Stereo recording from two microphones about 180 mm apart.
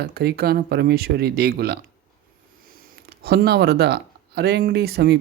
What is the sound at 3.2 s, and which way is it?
Speech, 60° right (ahead or behind).